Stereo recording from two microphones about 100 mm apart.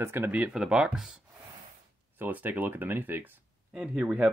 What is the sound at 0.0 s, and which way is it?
Speech, 20° right (ahead or behind).